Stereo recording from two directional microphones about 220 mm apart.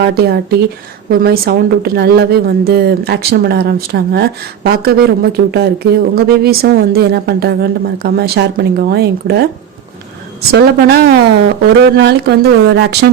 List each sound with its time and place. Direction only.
0.0 s a woman's voice: 45° right (ahead or behind)
10.5 s a woman's voice: 45° right (ahead or behind)